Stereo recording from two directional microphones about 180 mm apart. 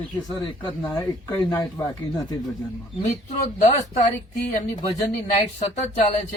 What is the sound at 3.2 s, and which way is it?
Speech, 40° left (ahead or behind).